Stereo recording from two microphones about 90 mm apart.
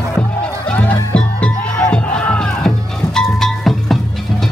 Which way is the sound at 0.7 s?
15° left (ahead or behind).